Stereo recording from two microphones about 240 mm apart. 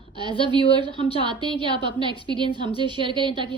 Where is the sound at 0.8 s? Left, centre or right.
Centre.